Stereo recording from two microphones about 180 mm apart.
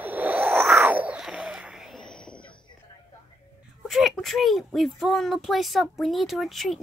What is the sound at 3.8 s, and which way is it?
Speech, centre (ahead or behind).